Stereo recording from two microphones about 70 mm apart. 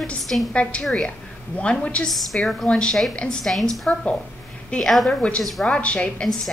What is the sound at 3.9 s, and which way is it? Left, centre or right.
Speech, centre.